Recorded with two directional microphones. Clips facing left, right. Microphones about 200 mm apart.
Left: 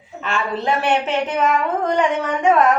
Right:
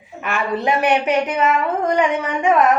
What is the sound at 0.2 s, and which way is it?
A woman's voice, 15° right (ahead or behind).